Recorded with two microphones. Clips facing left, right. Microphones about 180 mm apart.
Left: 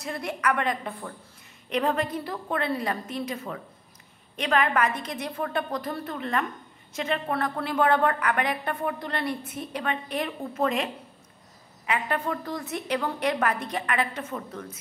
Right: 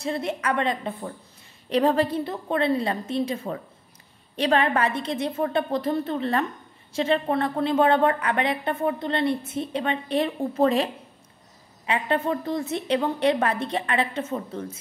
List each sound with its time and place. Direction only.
0.0 s a woman's voice: 25° right (ahead or behind)